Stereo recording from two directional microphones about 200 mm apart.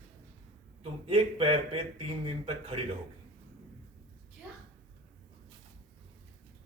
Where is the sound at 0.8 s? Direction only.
25° right (ahead or behind).